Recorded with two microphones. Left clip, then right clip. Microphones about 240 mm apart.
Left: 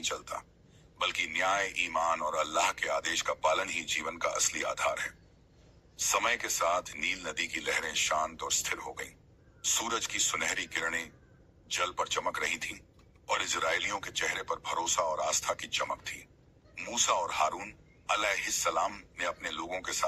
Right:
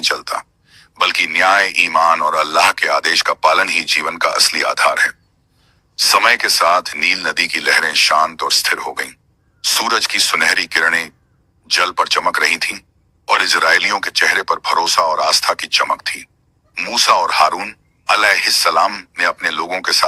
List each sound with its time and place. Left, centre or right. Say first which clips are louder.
0.0 s speech: right 18 dB; right